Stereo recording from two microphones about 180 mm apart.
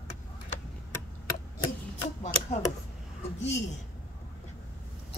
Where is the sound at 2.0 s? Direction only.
40° left (ahead or behind).